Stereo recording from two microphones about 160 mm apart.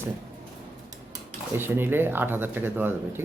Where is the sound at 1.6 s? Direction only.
15° right (ahead or behind).